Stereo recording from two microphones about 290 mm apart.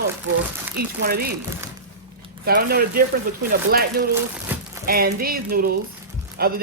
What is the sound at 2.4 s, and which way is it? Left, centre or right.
Speech, right.